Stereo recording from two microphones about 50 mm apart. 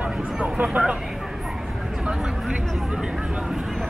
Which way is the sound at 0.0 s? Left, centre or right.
Right.